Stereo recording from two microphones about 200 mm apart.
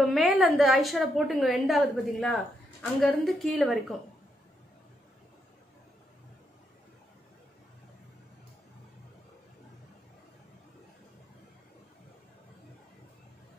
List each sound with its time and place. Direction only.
0.0 s a woman's voice: centre (ahead or behind)